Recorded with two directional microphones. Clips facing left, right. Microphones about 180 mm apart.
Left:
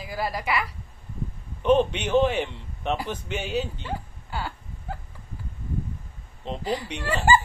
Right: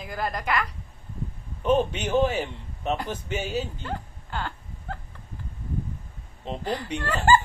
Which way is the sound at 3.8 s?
10° left (ahead or behind).